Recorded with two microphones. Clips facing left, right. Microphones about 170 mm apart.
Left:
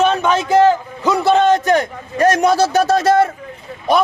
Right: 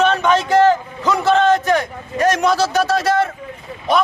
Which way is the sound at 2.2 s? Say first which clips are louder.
Left 3 dB; 45° left (ahead or behind).